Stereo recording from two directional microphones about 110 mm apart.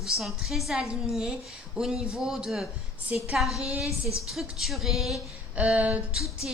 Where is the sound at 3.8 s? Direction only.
30° left (ahead or behind).